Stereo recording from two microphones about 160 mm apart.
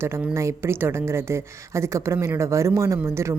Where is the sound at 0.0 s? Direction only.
15° right (ahead or behind).